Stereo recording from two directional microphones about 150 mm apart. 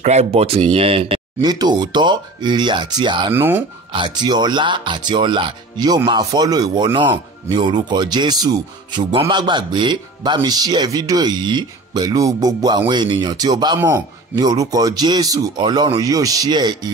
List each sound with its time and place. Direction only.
0.0 s speech: 45° right (ahead or behind)
1.5 s speech: 25° right (ahead or behind)
3.3 s speech: 15° right (ahead or behind)
3.9 s speech: 30° right (ahead or behind)
13.7 s speech: 15° right (ahead or behind)